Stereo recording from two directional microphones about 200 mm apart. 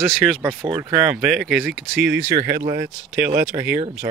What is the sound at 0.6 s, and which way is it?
Speech, 15° right (ahead or behind).